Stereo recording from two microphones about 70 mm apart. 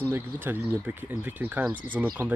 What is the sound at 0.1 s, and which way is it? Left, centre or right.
Speech, right.